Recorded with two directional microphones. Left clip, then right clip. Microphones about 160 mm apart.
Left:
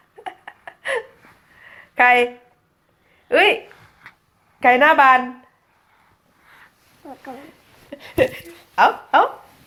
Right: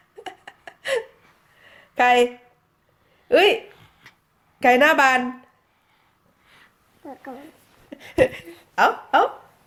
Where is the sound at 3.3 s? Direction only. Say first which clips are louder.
Left 1 dB; 45° right (ahead or behind).